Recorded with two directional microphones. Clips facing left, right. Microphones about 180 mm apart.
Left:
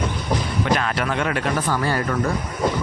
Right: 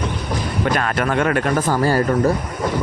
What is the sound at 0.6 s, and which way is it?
Speech, 50° right (ahead or behind).